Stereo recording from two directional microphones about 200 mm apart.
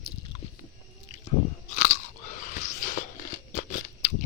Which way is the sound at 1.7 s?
35° left (ahead or behind).